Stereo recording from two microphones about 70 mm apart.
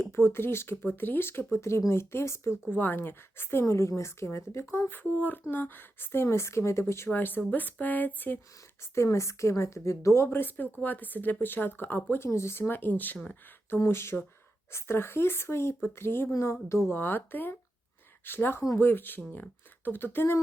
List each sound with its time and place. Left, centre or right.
0.0 s speech: left
2.7 s speech: left
7.1 s speech: left
8.8 s a woman's voice: left